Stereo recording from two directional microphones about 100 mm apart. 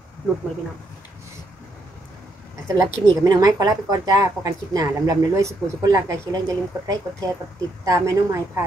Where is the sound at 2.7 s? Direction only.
35° right (ahead or behind).